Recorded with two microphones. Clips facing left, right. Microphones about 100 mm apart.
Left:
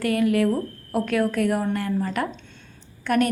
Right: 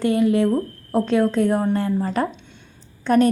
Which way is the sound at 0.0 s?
25° right (ahead or behind).